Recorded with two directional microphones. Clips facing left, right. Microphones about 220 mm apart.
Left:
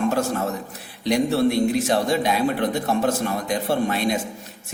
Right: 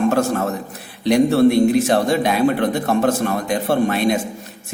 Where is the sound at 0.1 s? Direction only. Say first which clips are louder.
Right 4 dB; 55° right (ahead or behind).